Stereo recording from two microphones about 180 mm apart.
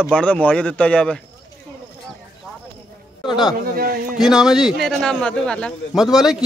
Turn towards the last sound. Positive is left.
turn(degrees=0)  # may be behind; listen again after turning